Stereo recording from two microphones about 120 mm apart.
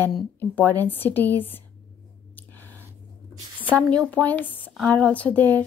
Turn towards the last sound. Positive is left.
turn(degrees=15)  # may be behind; listen again after turning